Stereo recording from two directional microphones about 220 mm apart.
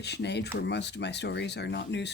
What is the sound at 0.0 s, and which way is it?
Speech, 50° left (ahead or behind).